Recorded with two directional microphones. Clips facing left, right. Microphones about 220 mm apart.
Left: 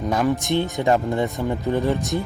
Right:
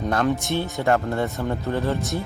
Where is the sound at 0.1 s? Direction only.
10° left (ahead or behind).